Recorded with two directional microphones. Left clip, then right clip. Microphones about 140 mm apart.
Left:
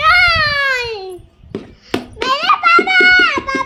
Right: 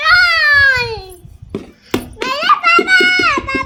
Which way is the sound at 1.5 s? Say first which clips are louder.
Right 1 dB; 45° right (ahead or behind).